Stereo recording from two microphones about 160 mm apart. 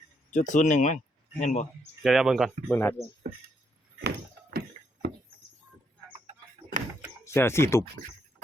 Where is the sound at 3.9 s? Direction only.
75° right (ahead or behind).